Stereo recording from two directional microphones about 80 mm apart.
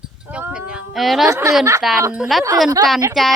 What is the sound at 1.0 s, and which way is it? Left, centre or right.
Speech, centre.